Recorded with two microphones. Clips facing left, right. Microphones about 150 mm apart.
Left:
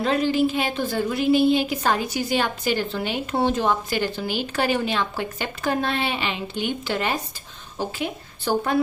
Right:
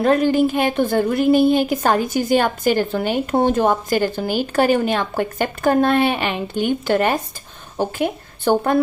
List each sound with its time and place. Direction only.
0.0 s a woman's voice: 50° right (ahead or behind)